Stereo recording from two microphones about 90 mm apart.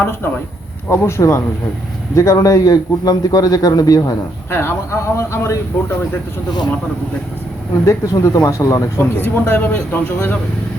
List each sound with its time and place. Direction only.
0.0 s a man's voice: 25° left (ahead or behind); by 4.1 s 45° left (ahead or behind)
4.5 s speech: 30° left (ahead or behind)
7.9 s speech: 35° left (ahead or behind)
9.0 s speech: 25° left (ahead or behind)